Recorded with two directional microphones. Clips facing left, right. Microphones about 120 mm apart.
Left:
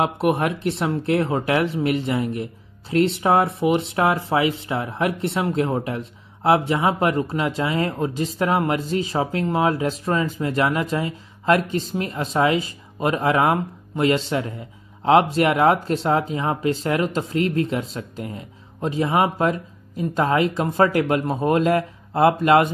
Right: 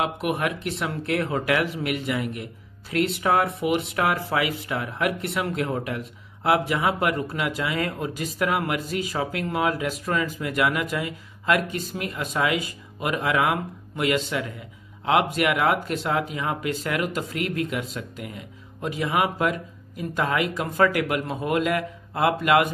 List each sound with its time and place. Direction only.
0.0 s speech: 30° left (ahead or behind)